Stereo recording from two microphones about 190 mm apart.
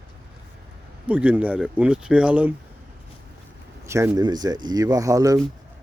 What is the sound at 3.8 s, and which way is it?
Speech, 15° right (ahead or behind).